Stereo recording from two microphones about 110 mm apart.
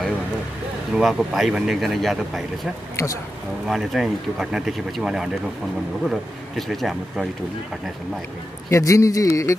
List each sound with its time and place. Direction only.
0.9 s speech: 5° right (ahead or behind)
8.6 s speech: 25° left (ahead or behind)